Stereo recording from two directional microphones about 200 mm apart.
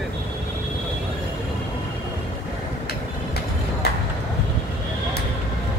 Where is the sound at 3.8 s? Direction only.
50° left (ahead or behind).